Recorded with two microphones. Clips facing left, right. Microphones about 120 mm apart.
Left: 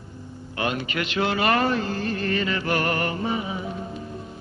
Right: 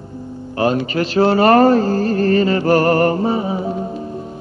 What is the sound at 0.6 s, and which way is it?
Speech, 35° right (ahead or behind).